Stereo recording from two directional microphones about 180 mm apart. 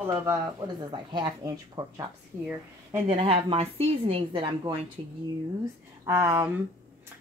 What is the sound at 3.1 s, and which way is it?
A woman's voice, 30° right (ahead or behind).